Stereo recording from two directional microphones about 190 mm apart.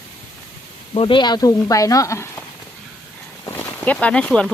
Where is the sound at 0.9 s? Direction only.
25° left (ahead or behind).